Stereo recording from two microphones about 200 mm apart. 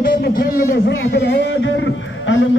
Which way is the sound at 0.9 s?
60° left (ahead or behind).